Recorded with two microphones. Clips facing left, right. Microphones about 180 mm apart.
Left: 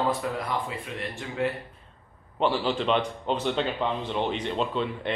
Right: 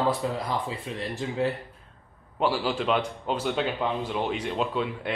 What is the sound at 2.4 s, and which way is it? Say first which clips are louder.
A man's voice: left 1 dB; 5° right (ahead or behind).